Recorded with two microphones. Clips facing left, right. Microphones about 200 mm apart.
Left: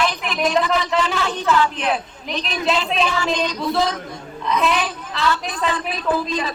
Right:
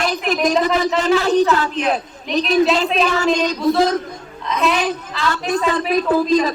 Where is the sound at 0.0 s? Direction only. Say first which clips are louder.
Right 3 dB; 45° right (ahead or behind).